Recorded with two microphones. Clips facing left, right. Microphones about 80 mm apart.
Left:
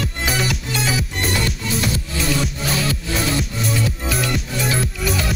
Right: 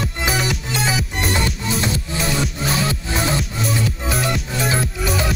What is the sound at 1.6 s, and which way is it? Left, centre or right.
Music, right.